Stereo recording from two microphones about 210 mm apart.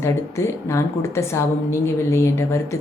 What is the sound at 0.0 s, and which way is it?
A woman's voice, 15° left (ahead or behind).